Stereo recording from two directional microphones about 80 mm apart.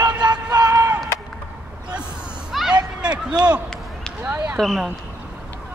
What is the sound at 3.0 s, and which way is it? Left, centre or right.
A man's voice, centre.